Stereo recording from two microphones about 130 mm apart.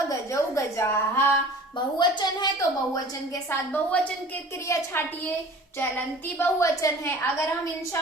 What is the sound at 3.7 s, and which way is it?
A woman's voice, 15° left (ahead or behind).